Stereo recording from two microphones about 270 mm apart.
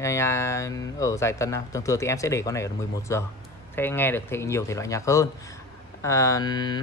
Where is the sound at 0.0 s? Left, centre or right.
Centre.